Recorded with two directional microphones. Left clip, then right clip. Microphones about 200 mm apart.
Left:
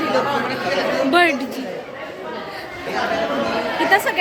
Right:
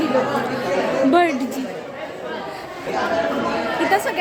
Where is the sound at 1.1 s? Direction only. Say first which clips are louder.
Left 2 dB; 5° right (ahead or behind).